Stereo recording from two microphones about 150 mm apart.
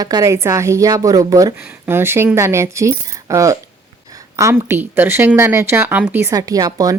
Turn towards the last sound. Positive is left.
turn(degrees=-25)  # may be behind; listen again after turning